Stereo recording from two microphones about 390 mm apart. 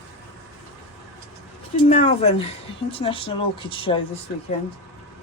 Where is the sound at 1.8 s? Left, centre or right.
Centre.